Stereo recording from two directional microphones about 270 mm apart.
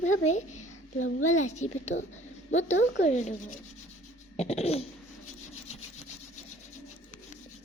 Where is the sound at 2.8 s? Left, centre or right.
Left.